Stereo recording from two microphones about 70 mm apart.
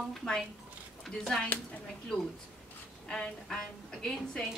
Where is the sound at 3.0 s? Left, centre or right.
Centre.